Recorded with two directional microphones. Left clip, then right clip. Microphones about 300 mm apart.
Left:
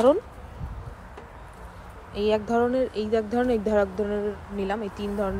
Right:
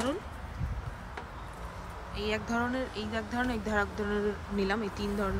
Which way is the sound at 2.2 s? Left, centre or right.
Centre.